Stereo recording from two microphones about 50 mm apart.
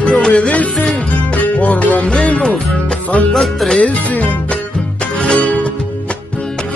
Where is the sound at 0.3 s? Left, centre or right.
Left.